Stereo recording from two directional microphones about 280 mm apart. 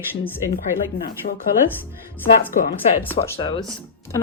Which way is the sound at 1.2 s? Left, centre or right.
Left.